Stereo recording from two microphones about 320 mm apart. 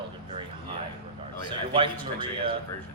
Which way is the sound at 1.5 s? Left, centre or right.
Centre.